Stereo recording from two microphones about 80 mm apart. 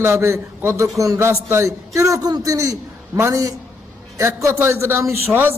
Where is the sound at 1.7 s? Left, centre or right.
Right.